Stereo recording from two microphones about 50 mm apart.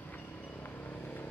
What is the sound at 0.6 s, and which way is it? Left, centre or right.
Vehicle, left.